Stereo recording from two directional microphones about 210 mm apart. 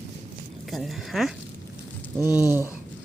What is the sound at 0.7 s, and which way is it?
Speech, centre (ahead or behind).